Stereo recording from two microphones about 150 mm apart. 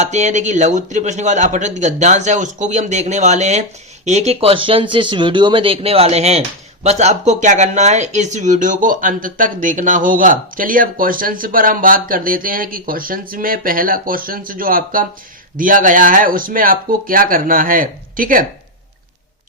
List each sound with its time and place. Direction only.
0.0 s speech: 50° right (ahead or behind); by 18.4 s 65° right (ahead or behind)